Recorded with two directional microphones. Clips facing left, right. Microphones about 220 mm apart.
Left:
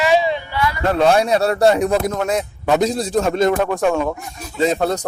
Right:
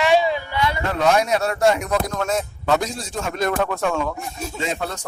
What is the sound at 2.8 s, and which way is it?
Speech, 35° left (ahead or behind).